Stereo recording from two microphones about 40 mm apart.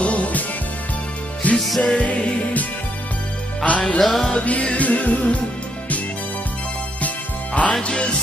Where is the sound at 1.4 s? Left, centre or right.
Left.